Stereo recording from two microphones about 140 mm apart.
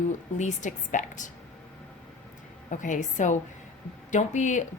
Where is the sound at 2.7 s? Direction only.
65° left (ahead or behind).